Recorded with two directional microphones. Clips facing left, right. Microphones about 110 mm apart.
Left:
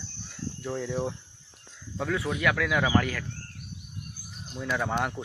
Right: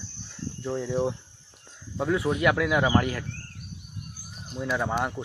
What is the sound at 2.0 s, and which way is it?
Speech, 20° right (ahead or behind).